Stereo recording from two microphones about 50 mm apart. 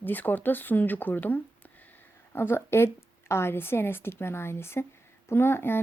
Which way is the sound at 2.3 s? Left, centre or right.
Left.